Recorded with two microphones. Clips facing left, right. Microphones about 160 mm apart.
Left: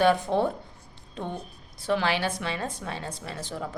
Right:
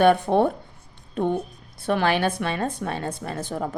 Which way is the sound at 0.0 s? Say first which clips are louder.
Right 5 dB; 55° right (ahead or behind).